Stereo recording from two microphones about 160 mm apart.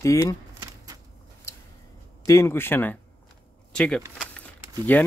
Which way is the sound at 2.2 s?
15° left (ahead or behind).